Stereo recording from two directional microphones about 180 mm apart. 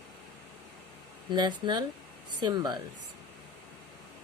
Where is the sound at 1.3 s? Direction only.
25° right (ahead or behind).